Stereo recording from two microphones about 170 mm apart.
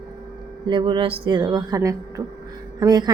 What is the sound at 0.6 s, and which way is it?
A woman's voice, 30° right (ahead or behind).